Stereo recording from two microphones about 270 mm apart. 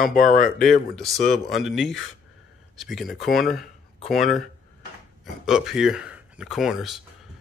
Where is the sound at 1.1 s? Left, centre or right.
Centre.